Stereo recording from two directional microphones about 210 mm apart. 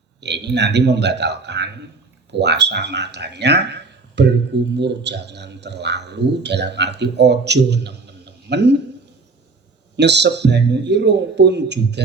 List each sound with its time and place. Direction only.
0.2 s a man's voice: 55° right (ahead or behind)
10.0 s a man's voice: 55° right (ahead or behind)